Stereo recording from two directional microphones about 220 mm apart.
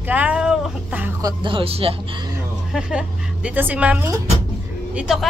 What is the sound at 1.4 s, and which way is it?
Speech, 25° right (ahead or behind).